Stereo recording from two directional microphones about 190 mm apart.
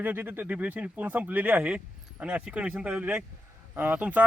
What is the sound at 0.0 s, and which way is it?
Speech, 10° right (ahead or behind).